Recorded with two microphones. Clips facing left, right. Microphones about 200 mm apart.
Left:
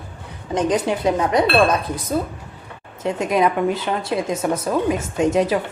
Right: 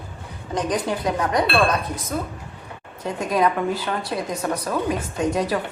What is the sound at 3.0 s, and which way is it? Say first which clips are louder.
Speech: left 3 dB; 20° left (ahead or behind).